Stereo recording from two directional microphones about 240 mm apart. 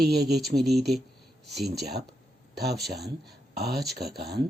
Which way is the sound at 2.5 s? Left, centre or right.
Right.